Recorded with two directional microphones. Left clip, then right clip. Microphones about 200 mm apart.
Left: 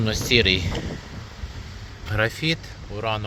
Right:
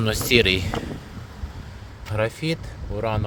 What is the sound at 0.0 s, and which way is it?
Speech, 55° right (ahead or behind).